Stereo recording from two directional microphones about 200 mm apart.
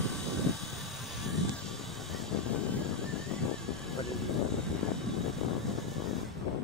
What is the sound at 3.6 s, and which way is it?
Vehicle, centre (ahead or behind).